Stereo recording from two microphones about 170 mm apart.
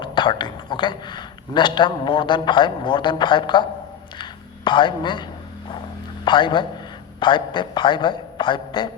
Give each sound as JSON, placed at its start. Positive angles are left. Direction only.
{"t": 0.0, "sound": "a man's voice", "side_deg": 25}
{"t": 4.2, "sound": "a sound", "side_deg": 30}
{"t": 6.2, "sound": "a man's voice", "side_deg": 30}